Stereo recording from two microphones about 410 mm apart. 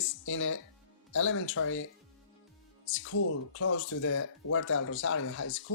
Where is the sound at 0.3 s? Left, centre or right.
Left.